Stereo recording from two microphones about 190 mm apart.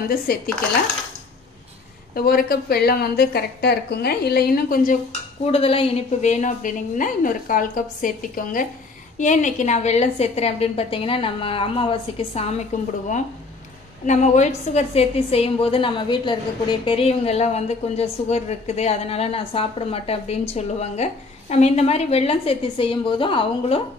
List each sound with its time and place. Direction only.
0.3 s speech: 50° left (ahead or behind)
2.1 s a woman's voice: 50° left (ahead or behind)
5.4 s a woman's voice: 30° left (ahead or behind)
14.0 s a woman's voice: 40° left (ahead or behind)